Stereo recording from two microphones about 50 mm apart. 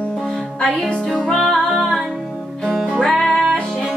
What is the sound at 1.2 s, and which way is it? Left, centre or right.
Music, centre.